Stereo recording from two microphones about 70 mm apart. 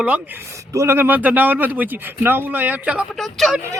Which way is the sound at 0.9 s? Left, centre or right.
Right.